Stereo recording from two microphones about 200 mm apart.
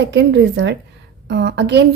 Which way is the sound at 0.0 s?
60° right (ahead or behind).